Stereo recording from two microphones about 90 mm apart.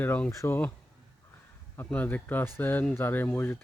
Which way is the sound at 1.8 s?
20° left (ahead or behind).